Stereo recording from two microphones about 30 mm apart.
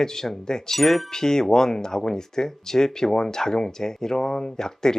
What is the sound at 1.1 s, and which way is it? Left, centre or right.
Speech, centre.